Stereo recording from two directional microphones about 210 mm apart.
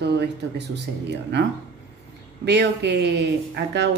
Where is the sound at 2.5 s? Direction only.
55° right (ahead or behind).